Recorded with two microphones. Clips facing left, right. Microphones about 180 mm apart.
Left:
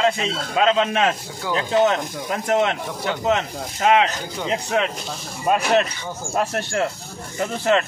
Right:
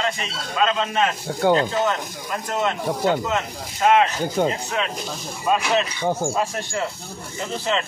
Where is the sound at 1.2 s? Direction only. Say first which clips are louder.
Right 7 dB; 60° right (ahead or behind).